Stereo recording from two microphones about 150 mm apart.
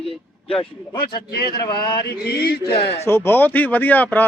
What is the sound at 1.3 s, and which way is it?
Mantra, 90° left.